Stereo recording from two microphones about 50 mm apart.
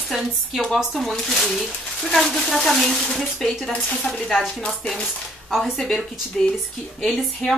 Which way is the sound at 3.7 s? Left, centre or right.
Centre.